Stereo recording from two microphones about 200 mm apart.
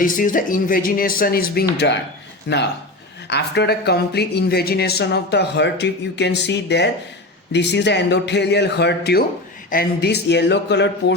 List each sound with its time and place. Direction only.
0.0 s speech: 40° left (ahead or behind); by 10.8 s 60° left (ahead or behind)